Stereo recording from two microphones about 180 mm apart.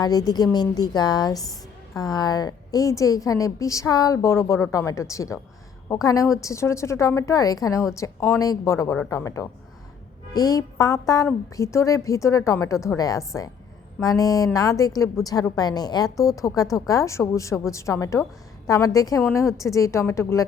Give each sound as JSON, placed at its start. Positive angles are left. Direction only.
{"t": 0.0, "sound": "a woman's voice", "side_deg": 20}